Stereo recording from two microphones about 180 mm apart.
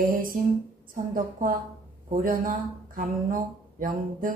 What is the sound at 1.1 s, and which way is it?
Speech, 50° right (ahead or behind).